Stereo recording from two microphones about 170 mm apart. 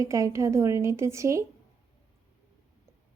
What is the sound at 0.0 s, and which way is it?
A woman's voice, 15° right (ahead or behind).